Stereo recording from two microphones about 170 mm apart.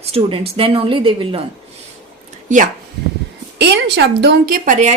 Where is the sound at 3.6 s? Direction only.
90° right; by 4.9 s 45° right (ahead or behind).